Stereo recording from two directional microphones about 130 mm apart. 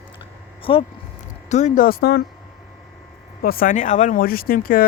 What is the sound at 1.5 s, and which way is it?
Speech, 65° left (ahead or behind).